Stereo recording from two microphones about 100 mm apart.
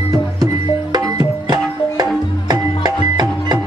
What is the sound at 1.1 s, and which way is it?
Music, 40° right (ahead or behind).